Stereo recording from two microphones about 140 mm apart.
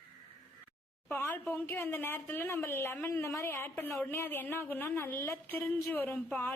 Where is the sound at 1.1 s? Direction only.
15° left (ahead or behind).